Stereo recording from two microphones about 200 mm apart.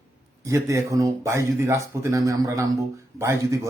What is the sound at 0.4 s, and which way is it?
Speech, 15° right (ahead or behind).